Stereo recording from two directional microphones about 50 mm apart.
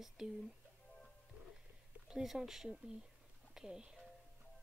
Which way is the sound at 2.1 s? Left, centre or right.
Centre.